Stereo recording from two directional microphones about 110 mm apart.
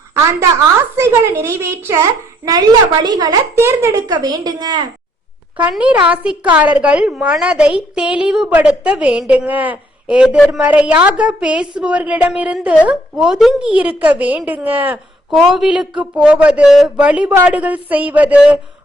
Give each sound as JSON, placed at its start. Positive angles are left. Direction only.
{"t": 0.9, "sound": "a child's voice", "side_deg": -25}
{"t": 3.5, "sound": "a child's voice", "side_deg": -25}
{"t": 5.7, "sound": "a woman's voice", "side_deg": -10}
{"t": 15.4, "sound": "a woman's voice", "side_deg": -5}